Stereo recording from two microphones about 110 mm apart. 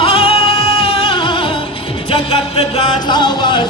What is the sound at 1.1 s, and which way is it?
Music, 45° left (ahead or behind).